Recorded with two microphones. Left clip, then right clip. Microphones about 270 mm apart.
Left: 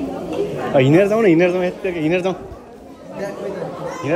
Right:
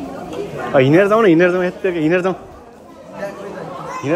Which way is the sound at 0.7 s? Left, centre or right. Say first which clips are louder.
Right 2 dB; centre.